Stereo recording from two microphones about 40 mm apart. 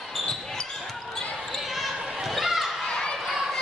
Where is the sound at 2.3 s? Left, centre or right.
Centre.